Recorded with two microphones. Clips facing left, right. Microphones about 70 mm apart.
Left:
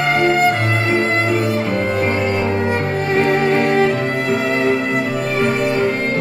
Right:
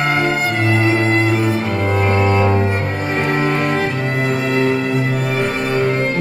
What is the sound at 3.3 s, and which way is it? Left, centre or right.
Music, right.